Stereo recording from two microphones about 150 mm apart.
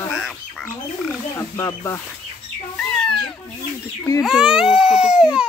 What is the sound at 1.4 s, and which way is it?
Speech, 15° left (ahead or behind).